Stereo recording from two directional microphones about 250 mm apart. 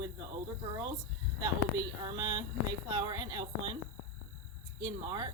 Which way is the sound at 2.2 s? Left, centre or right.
Centre.